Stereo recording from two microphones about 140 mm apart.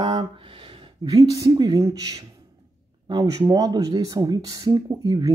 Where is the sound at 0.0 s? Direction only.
30° right (ahead or behind).